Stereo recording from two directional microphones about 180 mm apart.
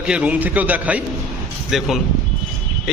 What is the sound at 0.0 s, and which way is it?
A man's voice, 5° right (ahead or behind).